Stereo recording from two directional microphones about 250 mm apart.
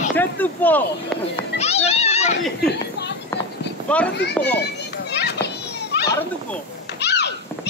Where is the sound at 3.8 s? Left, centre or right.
Centre.